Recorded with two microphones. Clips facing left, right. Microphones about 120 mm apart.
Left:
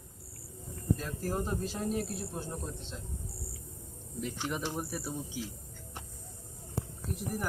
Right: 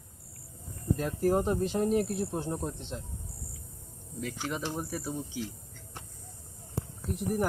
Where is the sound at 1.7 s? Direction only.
55° right (ahead or behind).